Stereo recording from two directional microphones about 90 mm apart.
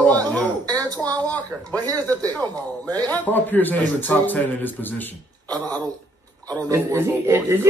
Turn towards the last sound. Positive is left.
turn(degrees=-30)  # may be behind; listen again after turning